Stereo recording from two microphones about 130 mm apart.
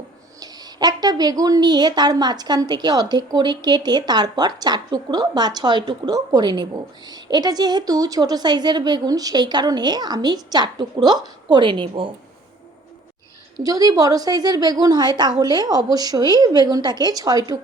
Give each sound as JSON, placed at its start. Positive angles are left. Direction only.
{"t": 0.3, "sound": "a woman's voice", "side_deg": -30}
{"t": 13.6, "sound": "a woman's voice", "side_deg": -30}